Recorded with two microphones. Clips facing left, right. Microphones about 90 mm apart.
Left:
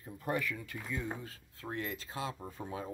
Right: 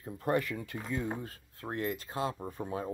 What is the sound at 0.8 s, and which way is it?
Speech, 25° right (ahead or behind).